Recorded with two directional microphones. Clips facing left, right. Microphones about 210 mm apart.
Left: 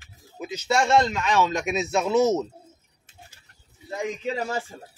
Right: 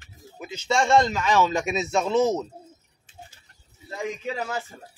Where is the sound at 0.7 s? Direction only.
5° left (ahead or behind).